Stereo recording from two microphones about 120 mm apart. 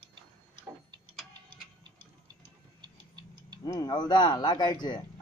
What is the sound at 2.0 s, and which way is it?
Tick-tock, 40° right (ahead or behind).